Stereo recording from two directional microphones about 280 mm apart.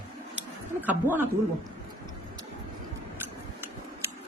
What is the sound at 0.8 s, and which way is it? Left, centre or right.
Speech, centre.